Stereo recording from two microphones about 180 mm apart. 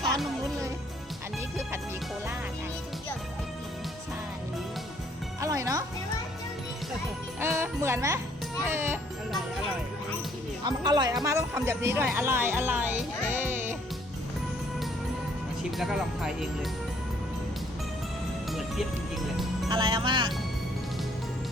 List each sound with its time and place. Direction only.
5.4 s music: 15° right (ahead or behind)
7.3 s music: 15° right (ahead or behind)
8.6 s speech: 15° right (ahead or behind)
10.7 s speech: 25° right (ahead or behind)
13.4 s music: 10° right (ahead or behind)
15.8 s speech: centre (ahead or behind)
19.7 s speech: 25° right (ahead or behind)